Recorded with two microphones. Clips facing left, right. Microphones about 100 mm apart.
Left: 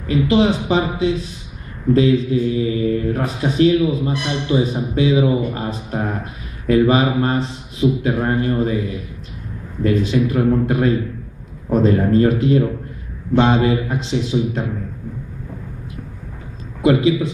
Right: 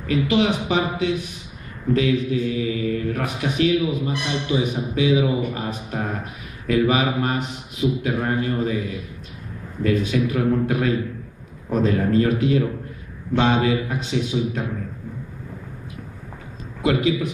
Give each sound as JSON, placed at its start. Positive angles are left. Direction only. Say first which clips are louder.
{"t": 0.0, "sound": "speech", "louder": "left 4 dB", "side_deg": 30}
{"t": 9.8, "sound": "speech", "louder": "left 3 dB", "side_deg": 30}
{"t": 16.8, "sound": "speech", "louder": "left 5 dB", "side_deg": 25}